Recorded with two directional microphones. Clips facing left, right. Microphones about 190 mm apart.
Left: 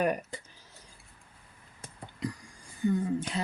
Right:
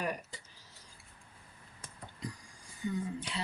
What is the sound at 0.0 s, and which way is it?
Speech, 55° left (ahead or behind).